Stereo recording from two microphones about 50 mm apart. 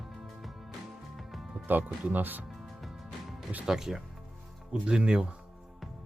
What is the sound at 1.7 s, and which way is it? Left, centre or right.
Speech, right.